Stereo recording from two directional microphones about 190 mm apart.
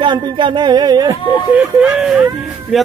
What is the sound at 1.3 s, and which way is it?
Speech, 5° right (ahead or behind).